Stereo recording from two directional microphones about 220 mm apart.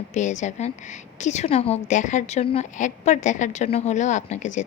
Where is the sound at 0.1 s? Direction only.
35° left (ahead or behind).